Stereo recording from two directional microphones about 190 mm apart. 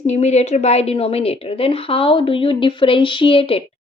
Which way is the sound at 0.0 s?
35° left (ahead or behind).